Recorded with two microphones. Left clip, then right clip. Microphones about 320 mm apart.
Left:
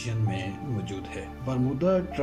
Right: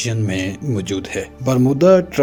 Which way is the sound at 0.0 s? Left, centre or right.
Right.